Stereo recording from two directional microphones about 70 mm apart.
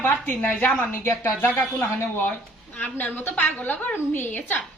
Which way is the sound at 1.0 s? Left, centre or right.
Left.